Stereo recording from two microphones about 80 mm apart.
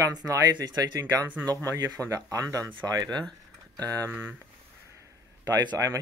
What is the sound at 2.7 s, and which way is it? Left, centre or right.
Speech, right.